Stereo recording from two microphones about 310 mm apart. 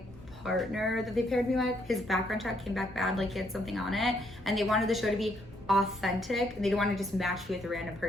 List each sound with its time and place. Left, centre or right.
0.4 s a woman's voice: centre